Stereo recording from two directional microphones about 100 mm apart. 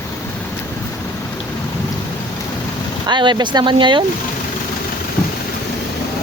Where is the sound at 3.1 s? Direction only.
50° right (ahead or behind).